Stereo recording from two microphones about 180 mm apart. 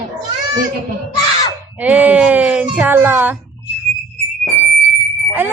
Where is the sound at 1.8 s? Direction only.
10° right (ahead or behind).